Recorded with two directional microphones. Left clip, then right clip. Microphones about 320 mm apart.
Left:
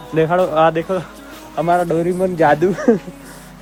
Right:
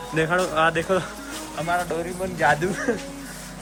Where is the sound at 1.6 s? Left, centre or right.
Centre.